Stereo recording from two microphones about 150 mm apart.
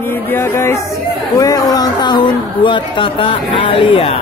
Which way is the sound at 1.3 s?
25° left (ahead or behind).